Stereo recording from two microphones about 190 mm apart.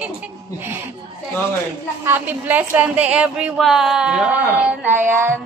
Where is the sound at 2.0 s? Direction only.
10° right (ahead or behind).